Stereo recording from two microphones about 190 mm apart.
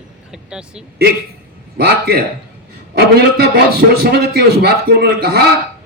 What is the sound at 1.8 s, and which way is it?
A man's voice, 55° right (ahead or behind).